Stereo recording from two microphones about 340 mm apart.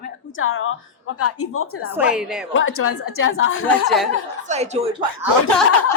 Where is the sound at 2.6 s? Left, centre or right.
Left.